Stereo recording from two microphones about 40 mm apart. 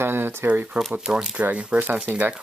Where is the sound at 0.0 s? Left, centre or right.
Right.